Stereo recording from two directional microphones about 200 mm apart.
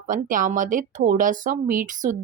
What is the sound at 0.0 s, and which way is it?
Speech, 40° right (ahead or behind).